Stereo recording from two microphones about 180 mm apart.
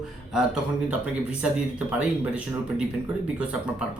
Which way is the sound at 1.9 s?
5° right (ahead or behind).